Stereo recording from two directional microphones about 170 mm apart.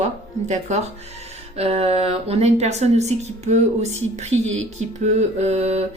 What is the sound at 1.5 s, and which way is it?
Speech, 35° right (ahead or behind).